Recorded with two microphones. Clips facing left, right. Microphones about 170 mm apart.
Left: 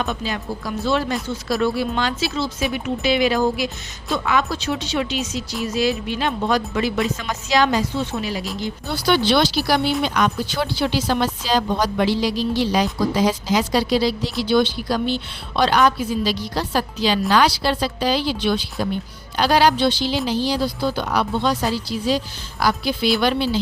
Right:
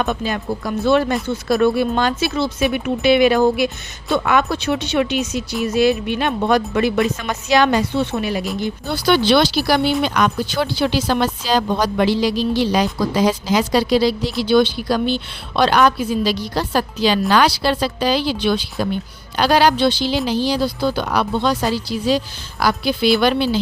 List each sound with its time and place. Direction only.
0.0 s a woman's voice: 55° right (ahead or behind); by 18.7 s 85° right
19.4 s speech: 65° right (ahead or behind)
22.6 s speech: 70° right (ahead or behind)